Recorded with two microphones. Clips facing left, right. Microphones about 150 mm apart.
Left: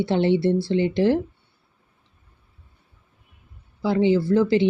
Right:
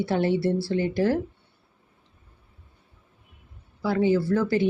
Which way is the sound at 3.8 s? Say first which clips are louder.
Left 3 dB; 20° left (ahead or behind).